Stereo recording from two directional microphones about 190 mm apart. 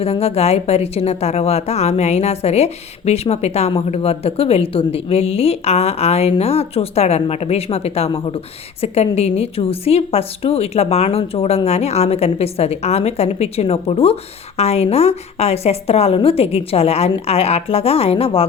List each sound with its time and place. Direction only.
0.0 s a woman's voice: 30° left (ahead or behind)